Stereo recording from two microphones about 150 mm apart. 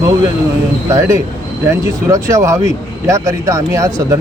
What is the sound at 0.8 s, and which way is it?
Speech, 20° right (ahead or behind).